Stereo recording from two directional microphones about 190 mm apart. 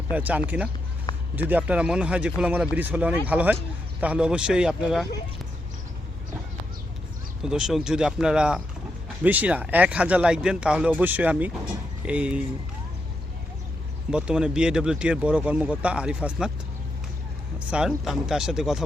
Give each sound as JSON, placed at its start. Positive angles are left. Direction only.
{"t": 0.1, "sound": "speech", "side_deg": -10}
{"t": 1.1, "sound": "a sound", "side_deg": 20}
{"t": 1.5, "sound": "speech", "side_deg": -5}
{"t": 7.4, "sound": "speech", "side_deg": -5}
{"t": 14.1, "sound": "speech", "side_deg": -5}
{"t": 17.7, "sound": "speech", "side_deg": -5}